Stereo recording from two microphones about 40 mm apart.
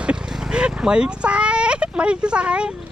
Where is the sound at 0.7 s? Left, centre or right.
Centre.